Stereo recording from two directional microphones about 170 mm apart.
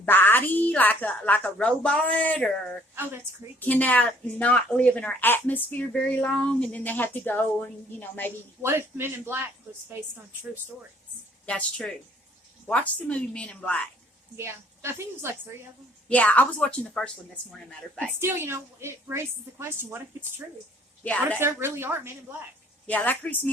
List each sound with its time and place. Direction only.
0.0 s speech: 10° left (ahead or behind)
2.9 s a woman's voice: 10° right (ahead or behind)
3.6 s speech: 10° left (ahead or behind)
8.6 s a woman's voice: 15° right (ahead or behind)
11.4 s speech: 5° left (ahead or behind)
14.3 s a woman's voice: 15° right (ahead or behind)
16.0 s speech: 10° left (ahead or behind)
18.0 s a woman's voice: 15° right (ahead or behind)
21.3 s a woman's voice: 15° right (ahead or behind)
22.9 s speech: 10° left (ahead or behind)